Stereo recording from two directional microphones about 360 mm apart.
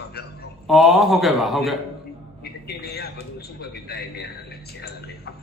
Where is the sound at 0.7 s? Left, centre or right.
Centre.